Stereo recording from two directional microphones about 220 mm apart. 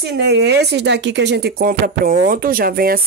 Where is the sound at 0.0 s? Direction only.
50° right (ahead or behind).